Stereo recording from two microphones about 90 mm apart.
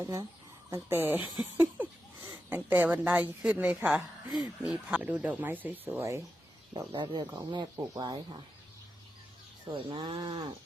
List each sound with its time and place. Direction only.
0.0 s speech: 35° right (ahead or behind)
0.7 s a woman's voice: 25° right (ahead or behind)
3.8 s a woman's voice: 5° right (ahead or behind); by 5.9 s 20° right (ahead or behind)
6.0 s speech: 30° right (ahead or behind)
6.7 s speech: 60° right (ahead or behind)
9.7 s speech: 70° right (ahead or behind)